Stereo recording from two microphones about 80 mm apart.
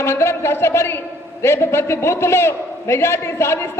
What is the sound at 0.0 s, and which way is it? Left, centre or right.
A man's voice, left.